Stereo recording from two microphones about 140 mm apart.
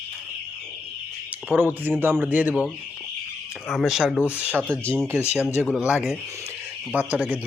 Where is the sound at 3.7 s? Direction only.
Centre (ahead or behind).